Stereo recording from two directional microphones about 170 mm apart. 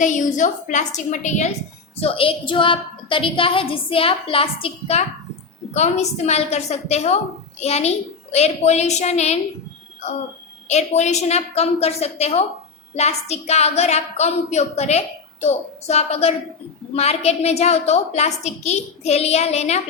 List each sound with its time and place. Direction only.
0.0 s a woman's voice: 45° left (ahead or behind)
2.0 s a woman's voice: 35° left (ahead or behind)
10.7 s a woman's voice: 40° left (ahead or behind)